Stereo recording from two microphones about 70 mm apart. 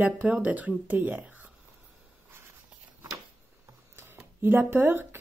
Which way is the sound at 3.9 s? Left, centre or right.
Right.